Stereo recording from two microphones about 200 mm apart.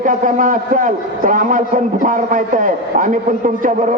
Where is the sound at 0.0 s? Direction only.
40° right (ahead or behind).